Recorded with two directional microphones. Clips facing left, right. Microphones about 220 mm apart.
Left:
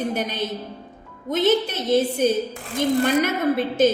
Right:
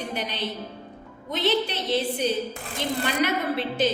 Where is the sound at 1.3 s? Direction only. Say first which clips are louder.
Left 5 dB; 45° left (ahead or behind).